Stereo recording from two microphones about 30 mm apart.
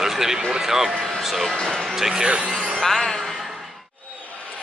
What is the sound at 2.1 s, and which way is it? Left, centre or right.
Speech, right.